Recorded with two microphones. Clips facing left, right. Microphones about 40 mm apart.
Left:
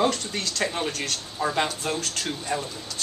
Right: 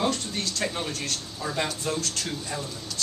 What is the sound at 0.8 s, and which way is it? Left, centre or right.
Speech, left.